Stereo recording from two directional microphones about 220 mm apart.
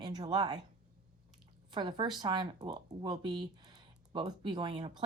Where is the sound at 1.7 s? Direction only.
20° right (ahead or behind).